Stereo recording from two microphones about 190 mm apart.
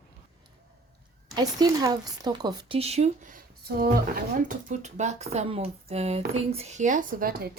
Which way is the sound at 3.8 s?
50° right (ahead or behind).